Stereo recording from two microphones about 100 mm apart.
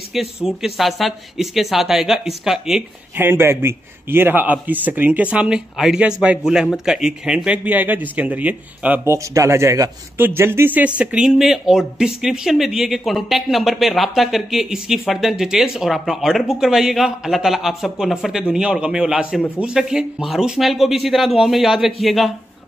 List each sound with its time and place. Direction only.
0.1 s speech: 5° right (ahead or behind)
3.2 s a man's voice: 20° right (ahead or behind)
9.0 s a man's voice: 30° right (ahead or behind); by 22.3 s centre (ahead or behind)